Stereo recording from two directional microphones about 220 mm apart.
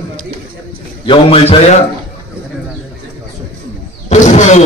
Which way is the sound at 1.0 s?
25° left (ahead or behind).